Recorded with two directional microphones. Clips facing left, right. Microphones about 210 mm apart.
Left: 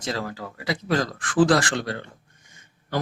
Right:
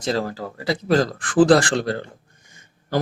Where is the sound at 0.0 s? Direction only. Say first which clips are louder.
Right 6 dB; 35° right (ahead or behind).